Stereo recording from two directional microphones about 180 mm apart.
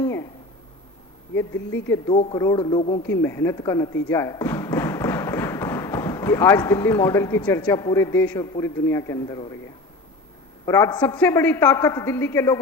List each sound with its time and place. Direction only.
0.0 s a sound: 15° left (ahead or behind)
1.4 s a woman's voice: 15° left (ahead or behind)
3.1 s speech: 15° left (ahead or behind)
10.7 s a woman's voice: 15° left (ahead or behind)